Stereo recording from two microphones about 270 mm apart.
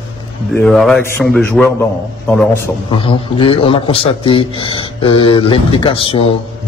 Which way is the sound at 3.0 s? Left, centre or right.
Centre.